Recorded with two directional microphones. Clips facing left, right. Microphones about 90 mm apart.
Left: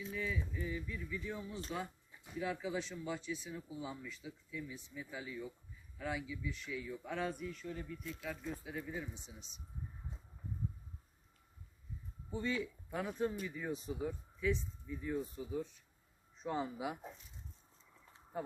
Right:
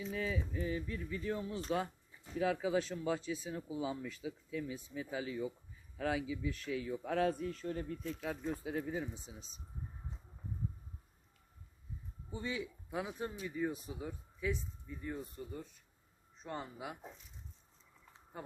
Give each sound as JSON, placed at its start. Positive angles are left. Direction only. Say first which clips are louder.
{"t": 0.1, "sound": "a man's voice", "louder": "right 2 dB", "side_deg": -55}
{"t": 2.4, "sound": "speech", "louder": "right 6 dB", "side_deg": -70}
{"t": 3.5, "sound": "speech", "louder": "right 6 dB", "side_deg": -85}
{"t": 4.0, "sound": "a man's voice", "louder": "right 6 dB", "side_deg": -75}
{"t": 12.3, "sound": "speech", "louder": "left 2 dB", "side_deg": -10}
{"t": 18.3, "sound": "speech", "louder": "left 5 dB", "side_deg": 0}